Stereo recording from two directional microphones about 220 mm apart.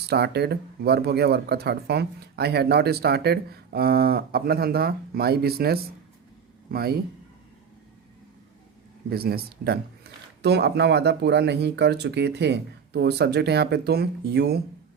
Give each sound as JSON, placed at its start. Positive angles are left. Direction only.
{"t": 0.0, "sound": "speech", "side_deg": -50}
{"t": 9.0, "sound": "speech", "side_deg": -45}